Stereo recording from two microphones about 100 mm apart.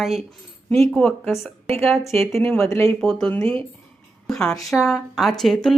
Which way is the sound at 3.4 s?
65° right (ahead or behind).